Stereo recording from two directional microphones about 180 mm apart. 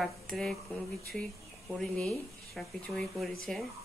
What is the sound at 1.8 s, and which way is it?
Speech, 5° left (ahead or behind).